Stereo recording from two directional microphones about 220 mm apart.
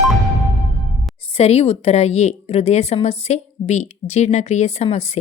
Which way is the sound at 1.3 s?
30° left (ahead or behind).